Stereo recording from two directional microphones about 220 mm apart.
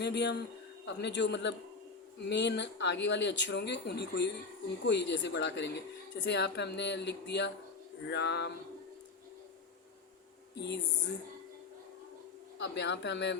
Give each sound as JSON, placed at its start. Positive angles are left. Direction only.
{"t": 0.0, "sound": "speech", "side_deg": 50}
{"t": 10.5, "sound": "speech", "side_deg": 50}
{"t": 12.5, "sound": "speech", "side_deg": 50}